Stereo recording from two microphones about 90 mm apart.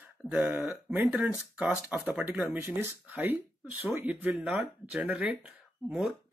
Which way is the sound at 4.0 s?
20° right (ahead or behind).